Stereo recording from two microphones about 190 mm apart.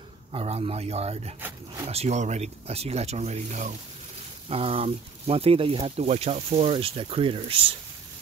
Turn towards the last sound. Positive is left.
turn(degrees=-30)  # may be behind; listen again after turning